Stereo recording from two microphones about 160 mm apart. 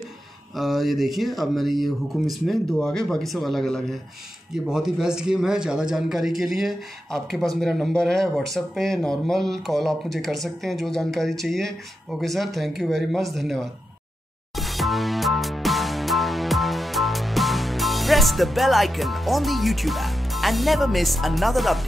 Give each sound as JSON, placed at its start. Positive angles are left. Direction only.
{"t": 0.6, "sound": "a man's voice", "side_deg": 0}
{"t": 14.5, "sound": "music", "side_deg": 0}